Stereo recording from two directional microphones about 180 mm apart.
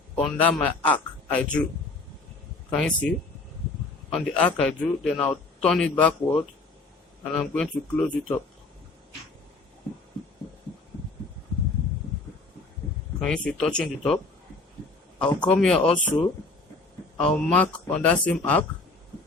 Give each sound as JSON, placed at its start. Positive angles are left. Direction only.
{"t": 0.2, "sound": "a man's voice", "side_deg": 0}
{"t": 2.7, "sound": "a man's voice", "side_deg": 5}
{"t": 13.1, "sound": "a man's voice", "side_deg": 5}
{"t": 15.4, "sound": "a man's voice", "side_deg": 5}
{"t": 17.2, "sound": "a man's voice", "side_deg": 5}